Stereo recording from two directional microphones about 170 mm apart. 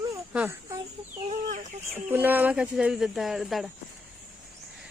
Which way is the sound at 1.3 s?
45° right (ahead or behind).